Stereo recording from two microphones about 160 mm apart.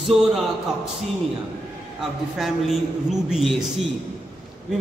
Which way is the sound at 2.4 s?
Centre (ahead or behind).